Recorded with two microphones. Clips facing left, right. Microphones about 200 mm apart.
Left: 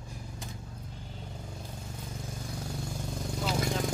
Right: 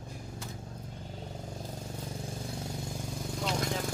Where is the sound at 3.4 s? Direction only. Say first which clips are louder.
Left 1 dB; 5° left (ahead or behind).